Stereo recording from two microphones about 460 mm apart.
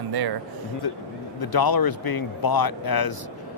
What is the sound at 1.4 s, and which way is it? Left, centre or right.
A man's voice, left.